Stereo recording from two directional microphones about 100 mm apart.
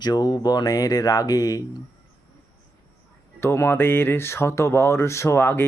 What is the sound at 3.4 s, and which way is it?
Speech, 25° left (ahead or behind).